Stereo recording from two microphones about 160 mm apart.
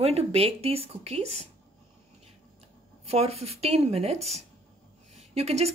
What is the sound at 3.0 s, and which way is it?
A woman's voice, 40° right (ahead or behind).